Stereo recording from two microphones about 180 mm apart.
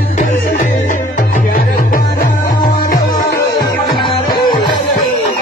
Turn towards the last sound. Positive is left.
turn(degrees=25)  # may be behind; listen again after turning